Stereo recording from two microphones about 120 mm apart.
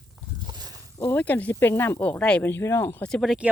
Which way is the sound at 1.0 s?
15° left (ahead or behind).